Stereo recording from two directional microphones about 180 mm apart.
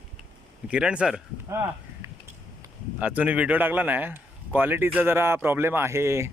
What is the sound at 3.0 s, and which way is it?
Speech, 10° right (ahead or behind).